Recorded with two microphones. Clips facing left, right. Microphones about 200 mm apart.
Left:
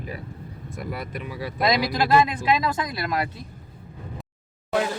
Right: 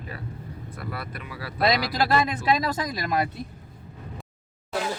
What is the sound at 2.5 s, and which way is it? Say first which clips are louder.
Speech: left 2 dB; 45° right (ahead or behind).